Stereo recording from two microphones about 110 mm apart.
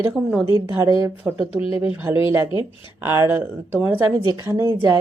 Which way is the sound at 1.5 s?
60° left (ahead or behind).